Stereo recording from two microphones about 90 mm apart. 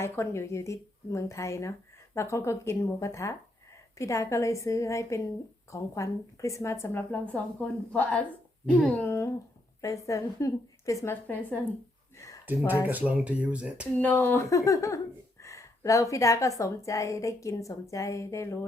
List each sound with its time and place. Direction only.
0.0 s a woman's voice: 30° left (ahead or behind)
7.1 s a woman's voice: 15° left (ahead or behind)
9.0 s a woman's voice: 30° left (ahead or behind)
11.1 s a woman's voice: 20° left (ahead or behind)
12.1 s a sound: 35° left (ahead or behind)
12.9 s speech: 15° right (ahead or behind)
14.0 s a woman's voice: 20° left (ahead or behind)
14.5 s a woman's voice: 35° left (ahead or behind)